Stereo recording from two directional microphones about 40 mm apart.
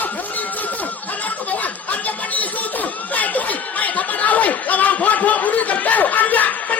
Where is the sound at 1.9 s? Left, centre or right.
Left.